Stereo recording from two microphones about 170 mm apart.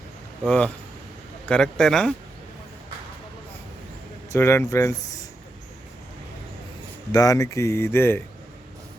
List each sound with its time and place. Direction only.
0.4 s speech: 5° left (ahead or behind)
4.3 s speech: 15° left (ahead or behind)
7.1 s speech: 20° left (ahead or behind)